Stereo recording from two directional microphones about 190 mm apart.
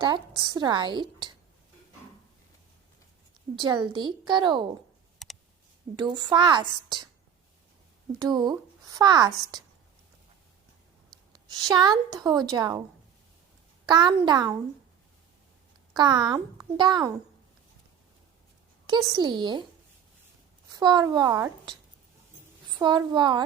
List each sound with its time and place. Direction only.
0.4 s a woman's voice: 25° right (ahead or behind)
3.6 s a woman's voice: 25° right (ahead or behind)
5.2 s clicking: centre (ahead or behind)
6.0 s a woman's voice: 25° right (ahead or behind)
8.2 s speech: 20° right (ahead or behind)
11.3 s a woman's voice: 20° right (ahead or behind)
13.8 s a woman's voice: 20° right (ahead or behind)
16.0 s a woman's voice: 25° right (ahead or behind)
19.1 s a woman's voice: 25° right (ahead or behind)
20.7 s speech: 20° right (ahead or behind)
22.8 s a woman's voice: 25° right (ahead or behind)